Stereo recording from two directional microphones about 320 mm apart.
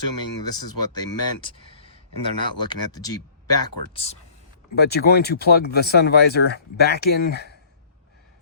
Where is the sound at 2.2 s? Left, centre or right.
Left.